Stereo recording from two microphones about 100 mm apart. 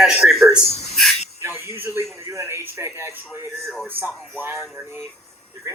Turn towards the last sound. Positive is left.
turn(degrees=-20)  # may be behind; listen again after turning